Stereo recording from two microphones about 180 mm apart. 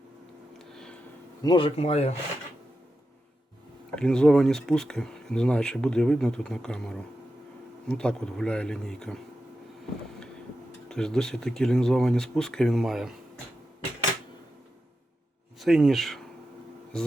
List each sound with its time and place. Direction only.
0.7 s a sound: centre (ahead or behind)
1.4 s speech: 25° left (ahead or behind)
3.9 s speech: 5° left (ahead or behind)
10.8 s speech: 5° left (ahead or behind)
15.5 s speech: centre (ahead or behind)